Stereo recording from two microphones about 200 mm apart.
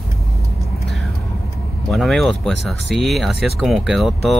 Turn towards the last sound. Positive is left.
turn(degrees=0)  # may be behind; listen again after turning